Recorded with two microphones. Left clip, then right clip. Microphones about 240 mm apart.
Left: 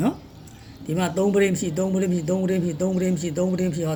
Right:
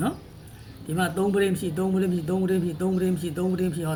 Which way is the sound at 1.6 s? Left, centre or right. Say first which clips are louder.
Left 2 dB; centre.